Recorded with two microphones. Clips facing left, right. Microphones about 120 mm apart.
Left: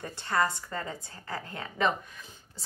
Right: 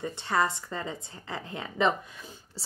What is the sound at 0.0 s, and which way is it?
A woman's voice, 20° right (ahead or behind).